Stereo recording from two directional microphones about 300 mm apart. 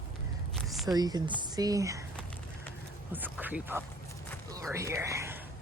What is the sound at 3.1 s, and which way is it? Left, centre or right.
Speech, centre.